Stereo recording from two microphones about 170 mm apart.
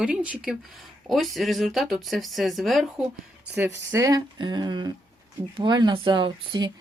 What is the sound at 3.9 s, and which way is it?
Speech, 20° right (ahead or behind).